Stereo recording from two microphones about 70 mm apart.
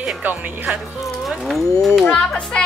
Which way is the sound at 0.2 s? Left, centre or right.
Right.